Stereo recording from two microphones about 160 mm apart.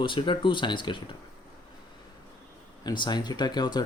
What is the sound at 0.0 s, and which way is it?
Speech, 30° left (ahead or behind).